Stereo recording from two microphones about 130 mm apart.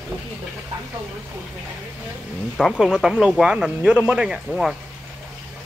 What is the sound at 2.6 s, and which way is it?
Speech, centre (ahead or behind).